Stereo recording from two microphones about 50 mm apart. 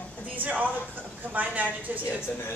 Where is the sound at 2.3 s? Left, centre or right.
Left.